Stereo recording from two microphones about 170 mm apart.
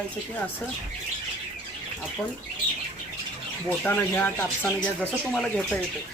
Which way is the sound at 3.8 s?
10° left (ahead or behind).